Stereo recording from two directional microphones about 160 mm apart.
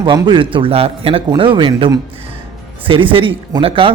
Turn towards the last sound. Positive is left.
turn(degrees=-35)  # may be behind; listen again after turning